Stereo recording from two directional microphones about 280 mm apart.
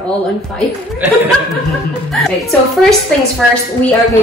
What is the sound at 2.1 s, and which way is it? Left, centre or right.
Speech, centre.